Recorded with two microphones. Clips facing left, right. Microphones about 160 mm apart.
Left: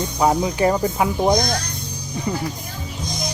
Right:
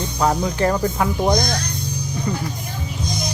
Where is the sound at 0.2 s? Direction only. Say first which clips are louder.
Left 1 dB; 10° left (ahead or behind).